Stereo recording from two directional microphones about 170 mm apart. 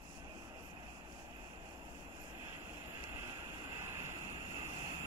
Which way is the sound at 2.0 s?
20° right (ahead or behind).